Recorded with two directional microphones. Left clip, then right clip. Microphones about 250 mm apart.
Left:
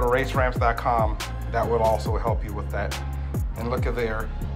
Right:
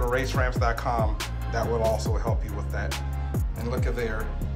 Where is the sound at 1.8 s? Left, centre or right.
Centre.